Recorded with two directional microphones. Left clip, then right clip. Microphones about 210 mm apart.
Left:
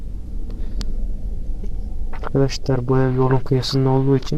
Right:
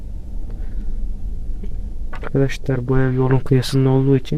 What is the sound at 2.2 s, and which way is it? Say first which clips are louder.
Speech: even; 25° right (ahead or behind).